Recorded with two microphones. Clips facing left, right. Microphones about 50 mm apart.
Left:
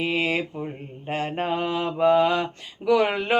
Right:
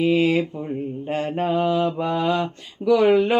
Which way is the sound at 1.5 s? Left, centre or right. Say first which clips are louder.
Right 6 dB; centre.